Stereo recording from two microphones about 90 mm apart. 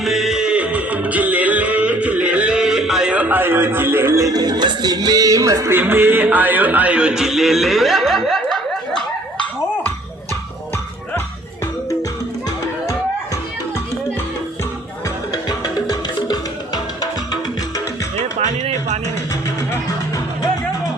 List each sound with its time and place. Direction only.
0.0 s music: 5° right (ahead or behind); by 4.2 s 25° right (ahead or behind)
4.2 s music: 45° right (ahead or behind)
5.7 s a sound: 25° right (ahead or behind); by 9.9 s 10° left (ahead or behind)
12.8 s music: 30° left (ahead or behind)
15.0 s music: 45° left (ahead or behind)
19.0 s music: 35° left (ahead or behind)